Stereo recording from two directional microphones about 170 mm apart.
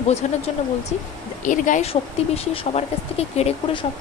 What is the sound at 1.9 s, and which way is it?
Speech, 35° left (ahead or behind).